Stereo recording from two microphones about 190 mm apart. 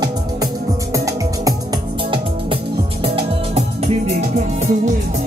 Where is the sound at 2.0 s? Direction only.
25° right (ahead or behind).